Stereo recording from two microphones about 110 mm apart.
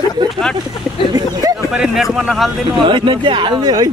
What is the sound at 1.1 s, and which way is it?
Speech, 35° right (ahead or behind).